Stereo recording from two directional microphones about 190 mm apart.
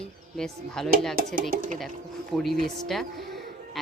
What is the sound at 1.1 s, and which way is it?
Speech, 50° right (ahead or behind).